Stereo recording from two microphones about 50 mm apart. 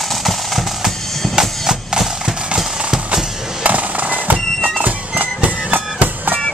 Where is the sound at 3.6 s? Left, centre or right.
Right.